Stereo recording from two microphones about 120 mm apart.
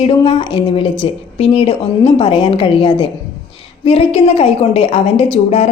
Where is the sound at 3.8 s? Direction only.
55° left (ahead or behind).